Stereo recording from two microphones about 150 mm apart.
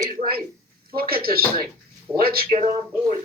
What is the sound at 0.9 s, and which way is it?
Speech, 90° right.